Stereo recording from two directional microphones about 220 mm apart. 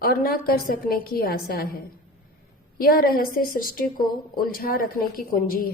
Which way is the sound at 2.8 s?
40° left (ahead or behind).